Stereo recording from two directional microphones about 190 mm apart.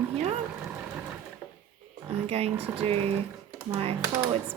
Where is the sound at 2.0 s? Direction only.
30° right (ahead or behind).